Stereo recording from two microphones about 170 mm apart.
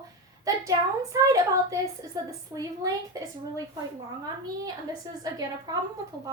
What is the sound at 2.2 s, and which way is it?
A woman's voice, 20° right (ahead or behind).